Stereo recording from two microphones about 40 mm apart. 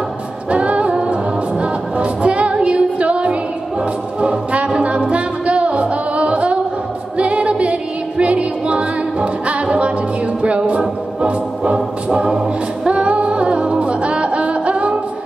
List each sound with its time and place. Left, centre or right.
0.5 s music: right
12.9 s music: right